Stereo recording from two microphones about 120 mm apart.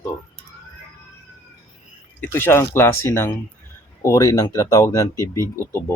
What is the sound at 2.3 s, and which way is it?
Speech, 20° left (ahead or behind).